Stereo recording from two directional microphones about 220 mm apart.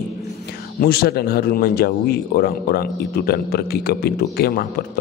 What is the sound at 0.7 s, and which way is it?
Speech, 45° left (ahead or behind).